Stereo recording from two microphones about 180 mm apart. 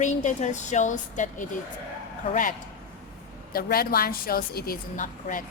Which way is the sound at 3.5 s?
55° left (ahead or behind).